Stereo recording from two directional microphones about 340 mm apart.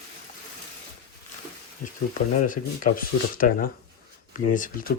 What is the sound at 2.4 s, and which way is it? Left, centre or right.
Speech, left.